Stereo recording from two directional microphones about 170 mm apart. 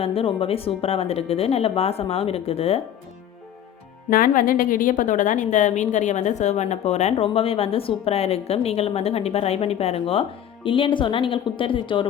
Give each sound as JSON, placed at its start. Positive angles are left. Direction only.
{"t": 0.0, "sound": "a woman's voice", "side_deg": 35}
{"t": 4.1, "sound": "a woman's voice", "side_deg": 55}